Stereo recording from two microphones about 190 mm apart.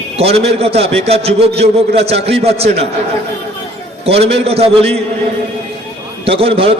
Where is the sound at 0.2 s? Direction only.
30° right (ahead or behind).